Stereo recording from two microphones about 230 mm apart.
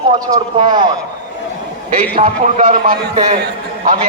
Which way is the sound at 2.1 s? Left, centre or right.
Right.